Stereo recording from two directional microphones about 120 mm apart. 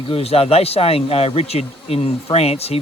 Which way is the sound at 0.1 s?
55° left (ahead or behind).